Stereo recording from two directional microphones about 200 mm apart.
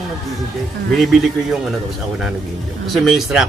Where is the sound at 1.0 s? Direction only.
Centre (ahead or behind).